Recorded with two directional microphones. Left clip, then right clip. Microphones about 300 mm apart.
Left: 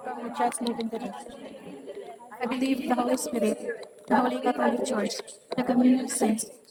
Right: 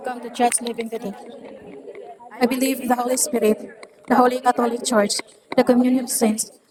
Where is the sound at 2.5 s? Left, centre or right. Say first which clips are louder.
Right 6 dB; right.